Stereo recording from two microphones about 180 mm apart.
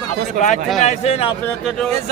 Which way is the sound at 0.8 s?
35° left (ahead or behind).